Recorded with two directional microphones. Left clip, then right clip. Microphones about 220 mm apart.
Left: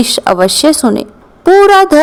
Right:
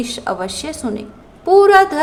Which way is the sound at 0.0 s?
45° left (ahead or behind).